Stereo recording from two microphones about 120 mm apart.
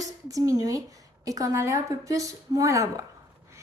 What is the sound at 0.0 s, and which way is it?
A woman's voice, 30° right (ahead or behind).